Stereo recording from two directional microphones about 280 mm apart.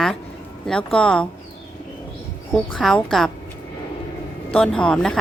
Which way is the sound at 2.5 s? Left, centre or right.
Centre.